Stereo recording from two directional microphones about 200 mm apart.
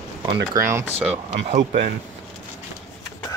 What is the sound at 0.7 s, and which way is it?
Speech, 10° right (ahead or behind).